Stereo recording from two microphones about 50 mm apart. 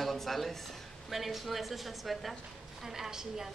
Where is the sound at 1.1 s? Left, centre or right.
Centre.